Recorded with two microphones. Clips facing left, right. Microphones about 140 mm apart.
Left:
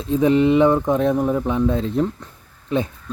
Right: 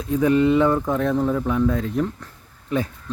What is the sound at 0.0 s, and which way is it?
Speech, 25° left (ahead or behind).